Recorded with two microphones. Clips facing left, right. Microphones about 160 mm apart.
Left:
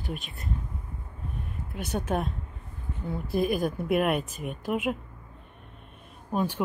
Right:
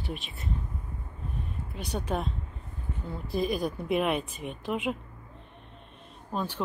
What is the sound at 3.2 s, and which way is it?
Speech, 55° left (ahead or behind).